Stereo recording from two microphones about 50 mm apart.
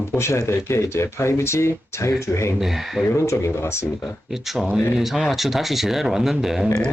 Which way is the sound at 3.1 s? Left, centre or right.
Left.